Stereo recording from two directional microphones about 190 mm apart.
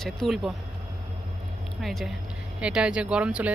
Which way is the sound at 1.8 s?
Centre (ahead or behind).